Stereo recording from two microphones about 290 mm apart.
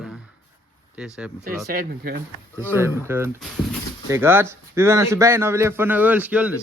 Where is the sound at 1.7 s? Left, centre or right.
Right.